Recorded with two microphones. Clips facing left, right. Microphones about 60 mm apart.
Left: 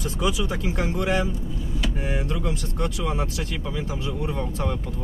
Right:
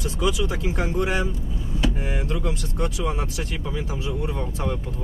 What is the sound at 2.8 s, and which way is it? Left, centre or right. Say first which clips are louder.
Speech: right 1 dB; centre.